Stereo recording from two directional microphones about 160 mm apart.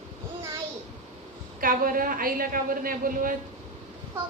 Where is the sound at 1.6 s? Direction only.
60° right (ahead or behind).